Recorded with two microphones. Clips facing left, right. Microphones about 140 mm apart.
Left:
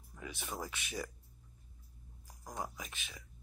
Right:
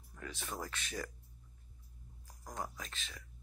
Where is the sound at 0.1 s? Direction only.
10° left (ahead or behind).